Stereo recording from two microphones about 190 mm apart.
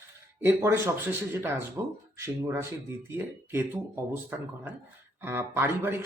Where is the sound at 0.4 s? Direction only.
10° right (ahead or behind).